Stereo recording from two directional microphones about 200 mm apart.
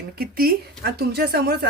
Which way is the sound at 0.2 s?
50° right (ahead or behind).